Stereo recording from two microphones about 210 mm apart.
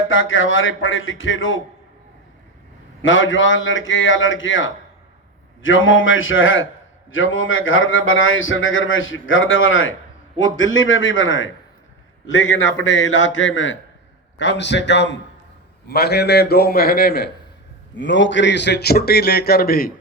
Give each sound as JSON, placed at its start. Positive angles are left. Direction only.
{"t": 0.1, "sound": "a man's voice", "side_deg": 65}
{"t": 3.0, "sound": "a man's voice", "side_deg": 65}